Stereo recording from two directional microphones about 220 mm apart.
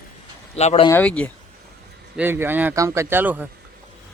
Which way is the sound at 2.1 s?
10° right (ahead or behind).